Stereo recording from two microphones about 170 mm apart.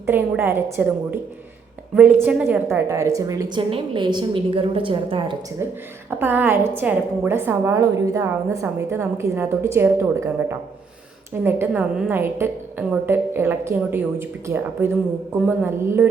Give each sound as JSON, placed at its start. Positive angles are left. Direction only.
{"t": 0.0, "sound": "a woman's voice", "side_deg": -15}
{"t": 6.1, "sound": "a woman's voice", "side_deg": -10}